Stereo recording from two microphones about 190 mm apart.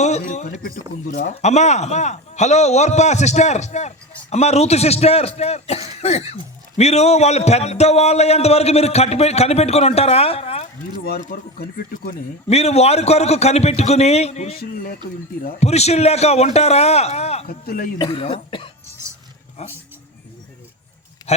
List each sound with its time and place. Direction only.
0.0 s a man's voice: 35° left (ahead or behind)
11.0 s speech: 50° left (ahead or behind)
12.5 s speech: 35° left (ahead or behind)
14.5 s speech: 50° left (ahead or behind)
15.6 s speech: 35° left (ahead or behind)
17.4 s speech: 50° left (ahead or behind)
17.9 s speech: 25° left (ahead or behind)
21.3 s speech: 35° left (ahead or behind)